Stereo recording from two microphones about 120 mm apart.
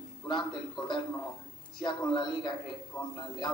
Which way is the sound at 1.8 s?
40° left (ahead or behind).